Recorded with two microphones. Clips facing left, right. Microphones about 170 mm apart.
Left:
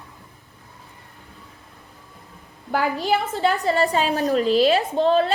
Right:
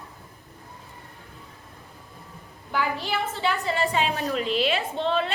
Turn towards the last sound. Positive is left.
turn(degrees=40)  # may be behind; listen again after turning